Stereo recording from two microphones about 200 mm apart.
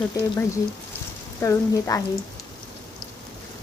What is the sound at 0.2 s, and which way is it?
A woman's voice, 15° left (ahead or behind).